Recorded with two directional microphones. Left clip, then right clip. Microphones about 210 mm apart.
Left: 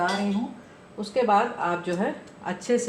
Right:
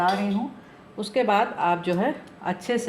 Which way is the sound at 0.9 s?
45° right (ahead or behind).